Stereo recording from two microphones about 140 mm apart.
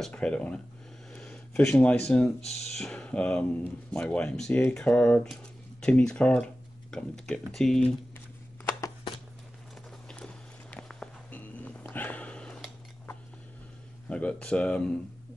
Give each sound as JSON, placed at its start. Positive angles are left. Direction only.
{"t": 0.0, "sound": "speech", "side_deg": 10}
{"t": 10.0, "sound": "music", "side_deg": 5}
{"t": 14.0, "sound": "speech", "side_deg": 5}